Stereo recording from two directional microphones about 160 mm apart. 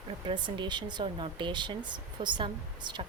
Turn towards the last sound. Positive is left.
turn(degrees=-30)  # may be behind; listen again after turning